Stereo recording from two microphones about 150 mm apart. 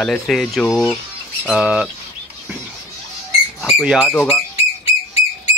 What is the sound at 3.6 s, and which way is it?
Speech, 5° right (ahead or behind).